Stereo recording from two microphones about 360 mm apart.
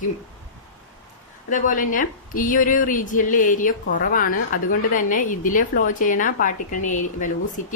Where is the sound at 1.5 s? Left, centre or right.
Left.